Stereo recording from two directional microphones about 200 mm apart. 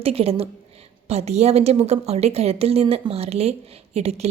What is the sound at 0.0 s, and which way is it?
A woman's voice, 30° right (ahead or behind).